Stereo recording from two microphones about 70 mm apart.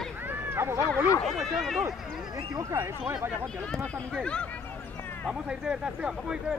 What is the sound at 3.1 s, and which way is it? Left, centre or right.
Speech, right.